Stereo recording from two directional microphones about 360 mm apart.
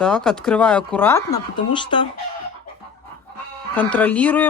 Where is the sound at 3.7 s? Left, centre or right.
Centre.